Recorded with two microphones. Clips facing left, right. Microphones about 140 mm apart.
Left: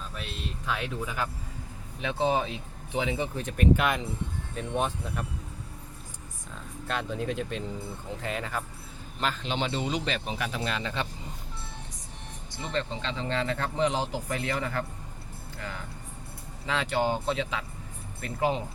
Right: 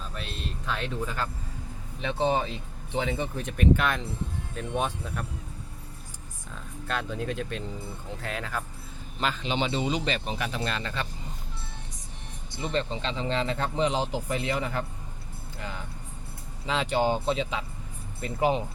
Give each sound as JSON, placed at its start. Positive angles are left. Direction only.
{"t": 0.7, "sound": "speech", "side_deg": 10}
{"t": 6.8, "sound": "speech", "side_deg": 0}
{"t": 12.6, "sound": "a man's voice", "side_deg": -20}
{"t": 16.6, "sound": "a man's voice", "side_deg": -20}